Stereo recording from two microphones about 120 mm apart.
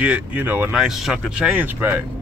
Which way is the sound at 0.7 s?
5° right (ahead or behind).